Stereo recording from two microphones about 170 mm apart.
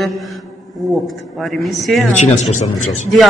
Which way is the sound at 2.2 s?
45° left (ahead or behind).